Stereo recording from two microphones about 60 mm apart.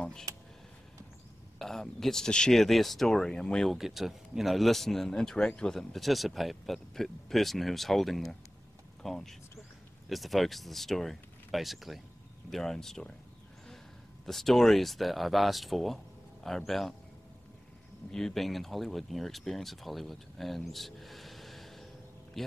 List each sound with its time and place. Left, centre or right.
0.3 s a sound: right
1.6 s speech: centre
3.7 s speech: centre
14.2 s speech: centre
18.1 s speech: centre